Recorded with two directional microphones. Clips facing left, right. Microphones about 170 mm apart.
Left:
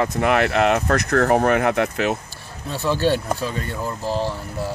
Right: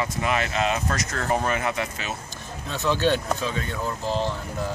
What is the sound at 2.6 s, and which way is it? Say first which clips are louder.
Speech: left 2 dB; 10° left (ahead or behind).